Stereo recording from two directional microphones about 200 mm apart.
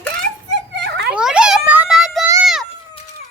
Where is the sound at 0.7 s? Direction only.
60° right (ahead or behind).